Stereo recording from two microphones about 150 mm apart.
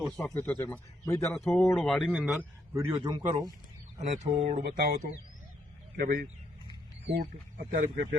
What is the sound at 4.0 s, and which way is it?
Speech, 45° right (ahead or behind).